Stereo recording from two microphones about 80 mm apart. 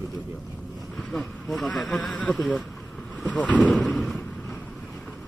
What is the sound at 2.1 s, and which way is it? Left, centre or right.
Speech, centre.